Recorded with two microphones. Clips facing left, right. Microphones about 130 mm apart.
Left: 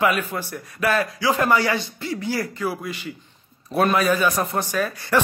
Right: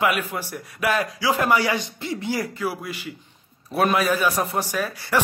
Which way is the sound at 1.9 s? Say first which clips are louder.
Left 1 dB; 25° right (ahead or behind).